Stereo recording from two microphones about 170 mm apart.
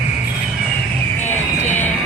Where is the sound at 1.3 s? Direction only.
45° left (ahead or behind).